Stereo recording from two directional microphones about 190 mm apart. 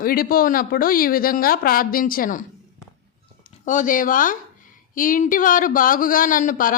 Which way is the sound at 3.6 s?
40° left (ahead or behind).